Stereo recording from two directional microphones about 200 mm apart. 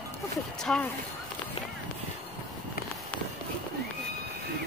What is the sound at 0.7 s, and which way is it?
Speech, 5° left (ahead or behind).